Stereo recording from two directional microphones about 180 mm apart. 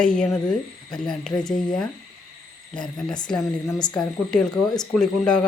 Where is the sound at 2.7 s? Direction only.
5° left (ahead or behind).